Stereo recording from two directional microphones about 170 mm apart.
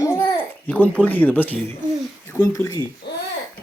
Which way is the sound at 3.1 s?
75° left (ahead or behind).